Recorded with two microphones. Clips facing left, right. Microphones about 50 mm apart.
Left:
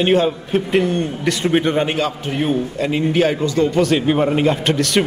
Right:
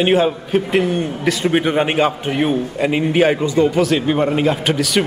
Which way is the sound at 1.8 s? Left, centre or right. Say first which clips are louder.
Right 3 dB; right.